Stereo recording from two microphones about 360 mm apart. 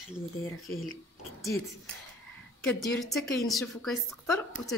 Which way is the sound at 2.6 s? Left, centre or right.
Centre.